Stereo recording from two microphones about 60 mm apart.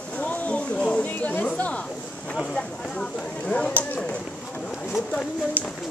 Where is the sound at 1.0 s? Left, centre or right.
Left.